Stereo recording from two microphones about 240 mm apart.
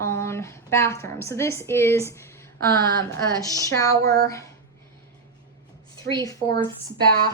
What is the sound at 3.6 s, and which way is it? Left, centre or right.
Speech, centre.